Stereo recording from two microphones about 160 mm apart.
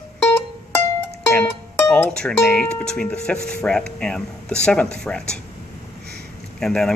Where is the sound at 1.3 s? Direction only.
10° left (ahead or behind).